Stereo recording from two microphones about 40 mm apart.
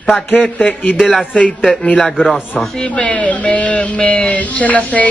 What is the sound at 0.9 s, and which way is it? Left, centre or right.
Speech, centre.